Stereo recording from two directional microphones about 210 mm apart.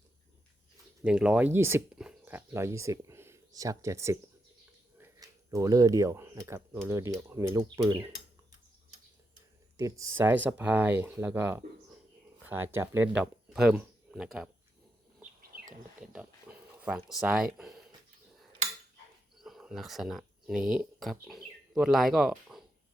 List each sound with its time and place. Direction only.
1.0 s speech: 5° right (ahead or behind)
9.7 s speech: 15° right (ahead or behind)
15.4 s bird: 45° right (ahead or behind)
16.1 s speech: 5° right (ahead or behind)
19.4 s speech: centre (ahead or behind)